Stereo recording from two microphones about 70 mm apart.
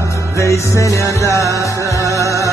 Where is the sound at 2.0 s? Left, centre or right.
Right.